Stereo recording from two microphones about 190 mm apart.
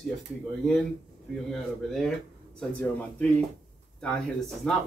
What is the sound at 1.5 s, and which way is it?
Speech, centre (ahead or behind).